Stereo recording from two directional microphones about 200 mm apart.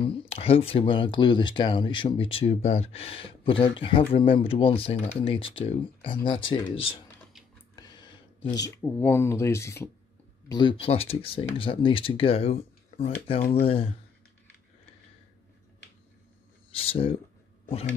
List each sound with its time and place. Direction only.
0.0 s speech: 25° left (ahead or behind)
7.7 s a sound: 20° left (ahead or behind)
8.5 s speech: 15° left (ahead or behind)
10.5 s speech: 25° left (ahead or behind)
16.7 s speech: 30° left (ahead or behind)